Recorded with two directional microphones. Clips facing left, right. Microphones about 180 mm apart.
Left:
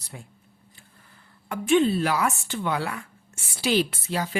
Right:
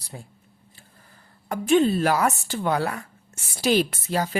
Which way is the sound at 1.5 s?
40° right (ahead or behind).